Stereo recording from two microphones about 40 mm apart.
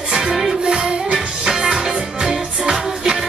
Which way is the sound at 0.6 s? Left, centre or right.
Right.